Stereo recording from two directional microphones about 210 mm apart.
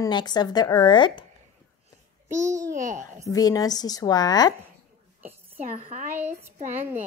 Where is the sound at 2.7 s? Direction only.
35° right (ahead or behind).